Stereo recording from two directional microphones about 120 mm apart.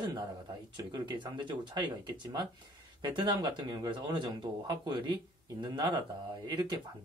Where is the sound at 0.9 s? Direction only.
40° right (ahead or behind).